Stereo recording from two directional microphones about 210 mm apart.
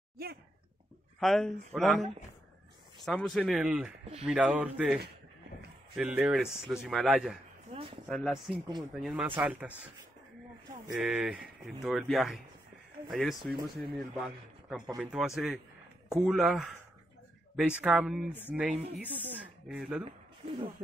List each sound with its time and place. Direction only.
1.2 s speech: centre (ahead or behind)
7.7 s a sound: 25° right (ahead or behind)
8.1 s speech: centre (ahead or behind)
11.0 s speech: 5° right (ahead or behind)
20.1 s speech: 25° right (ahead or behind)